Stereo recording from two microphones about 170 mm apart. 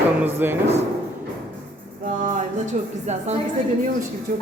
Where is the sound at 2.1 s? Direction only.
50° right (ahead or behind).